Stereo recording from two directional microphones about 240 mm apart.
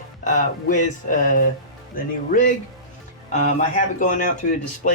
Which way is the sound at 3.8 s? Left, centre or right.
Left.